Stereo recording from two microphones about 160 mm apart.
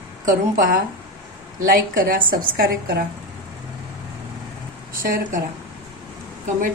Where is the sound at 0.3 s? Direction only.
60° right (ahead or behind).